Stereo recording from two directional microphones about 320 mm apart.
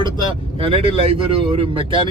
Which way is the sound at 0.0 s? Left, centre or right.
Centre.